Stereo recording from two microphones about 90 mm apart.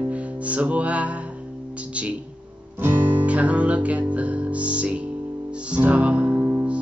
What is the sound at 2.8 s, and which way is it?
Music, 20° right (ahead or behind).